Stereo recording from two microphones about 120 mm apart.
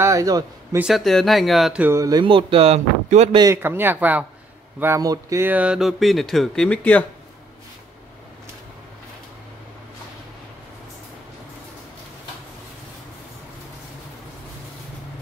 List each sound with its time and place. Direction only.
0.0 s a sound: 25° right (ahead or behind)
0.7 s speech: 5° right (ahead or behind)
1.8 s speech: 20° right (ahead or behind)
2.0 s speech: 35° right (ahead or behind)
2.3 s speech: 55° right (ahead or behind)
3.6 s a man's voice: 15° right (ahead or behind)
5.0 s speech: 30° right (ahead or behind)
5.4 s speech: 10° right (ahead or behind); by 7.1 s 10° left (ahead or behind)